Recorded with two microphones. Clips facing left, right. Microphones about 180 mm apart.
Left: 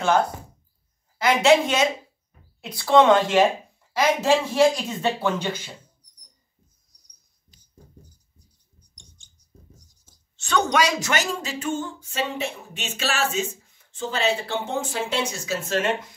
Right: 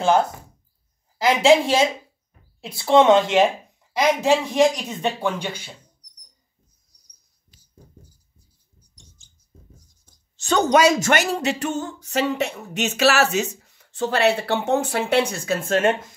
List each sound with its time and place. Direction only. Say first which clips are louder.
1.1 s a woman's voice: right 2 dB; 30° right (ahead or behind); by 5.7 s 10° right (ahead or behind)
8.9 s mouse: right 2 dB; 5° right (ahead or behind)
9.8 s a sound: right 1 dB; centre (ahead or behind)
10.3 s a woman's voice: right 5 dB; 40° right (ahead or behind)
11.0 s speech: right 5 dB; 60° right (ahead or behind)